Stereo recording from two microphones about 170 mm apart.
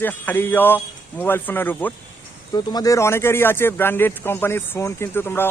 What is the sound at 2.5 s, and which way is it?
A man's voice, 20° left (ahead or behind).